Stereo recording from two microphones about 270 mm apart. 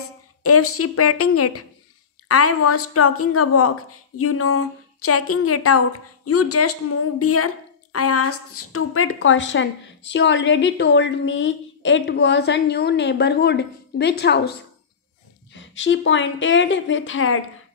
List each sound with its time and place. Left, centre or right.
0.4 s a woman's voice: left
15.5 s a woman's voice: left